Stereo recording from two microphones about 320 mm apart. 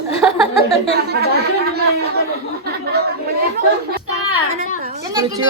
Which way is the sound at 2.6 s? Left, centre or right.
Right.